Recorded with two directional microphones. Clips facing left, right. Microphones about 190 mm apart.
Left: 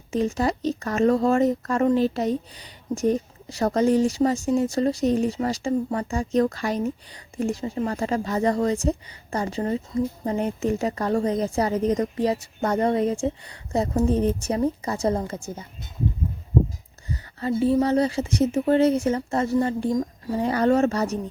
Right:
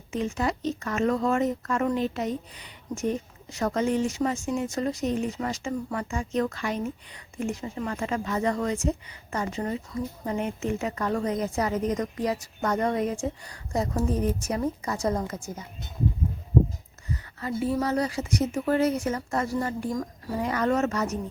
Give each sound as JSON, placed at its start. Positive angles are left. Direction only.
{"t": 0.1, "sound": "speech", "side_deg": 35}
{"t": 17.1, "sound": "speech", "side_deg": 30}